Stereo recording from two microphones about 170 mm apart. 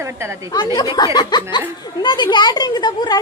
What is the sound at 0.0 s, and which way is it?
Speech, 15° right (ahead or behind).